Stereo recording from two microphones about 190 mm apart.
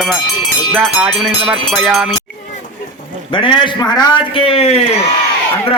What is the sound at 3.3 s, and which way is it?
A man's voice, 25° left (ahead or behind).